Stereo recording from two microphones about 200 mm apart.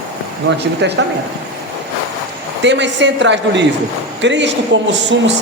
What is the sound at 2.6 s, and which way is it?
Speech, 65° right (ahead or behind).